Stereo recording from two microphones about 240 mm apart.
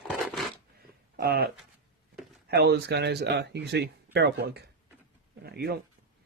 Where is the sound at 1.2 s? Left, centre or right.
Right.